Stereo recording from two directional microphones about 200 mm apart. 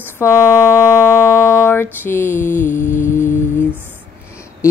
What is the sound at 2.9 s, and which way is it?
Music, 40° left (ahead or behind).